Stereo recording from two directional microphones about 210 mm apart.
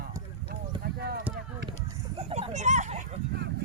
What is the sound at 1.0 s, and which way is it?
Speech, 50° right (ahead or behind).